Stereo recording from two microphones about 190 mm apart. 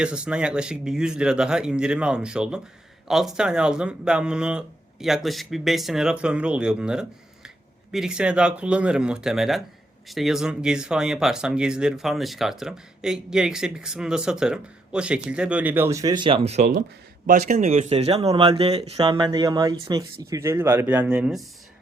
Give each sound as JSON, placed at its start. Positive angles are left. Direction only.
{"t": 0.0, "sound": "speech", "side_deg": -5}